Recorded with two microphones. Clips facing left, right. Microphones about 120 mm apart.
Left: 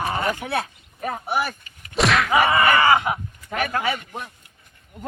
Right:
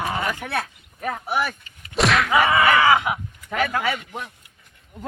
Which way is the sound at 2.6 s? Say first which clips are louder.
Even; centre (ahead or behind).